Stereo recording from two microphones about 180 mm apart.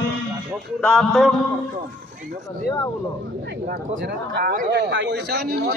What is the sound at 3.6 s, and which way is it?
Speech, 55° right (ahead or behind).